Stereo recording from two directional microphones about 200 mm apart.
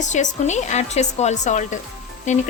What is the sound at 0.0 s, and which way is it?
Speech, 35° left (ahead or behind).